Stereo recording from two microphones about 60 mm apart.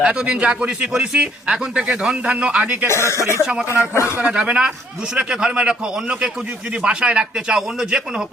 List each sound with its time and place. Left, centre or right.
0.0 s a man's voice: centre
2.8 s speech: left
4.2 s a man's voice: centre